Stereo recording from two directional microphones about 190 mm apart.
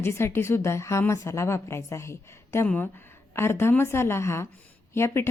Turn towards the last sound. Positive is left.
turn(degrees=15)  # may be behind; listen again after turning